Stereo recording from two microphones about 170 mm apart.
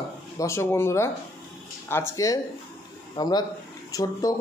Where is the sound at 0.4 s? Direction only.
15° left (ahead or behind).